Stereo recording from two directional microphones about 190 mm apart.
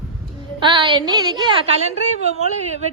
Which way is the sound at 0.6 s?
25° right (ahead or behind).